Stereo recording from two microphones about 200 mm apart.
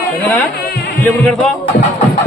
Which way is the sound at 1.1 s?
5° left (ahead or behind).